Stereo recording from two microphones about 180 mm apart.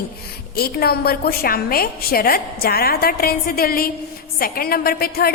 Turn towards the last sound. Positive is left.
turn(degrees=55)  # may be behind; listen again after turning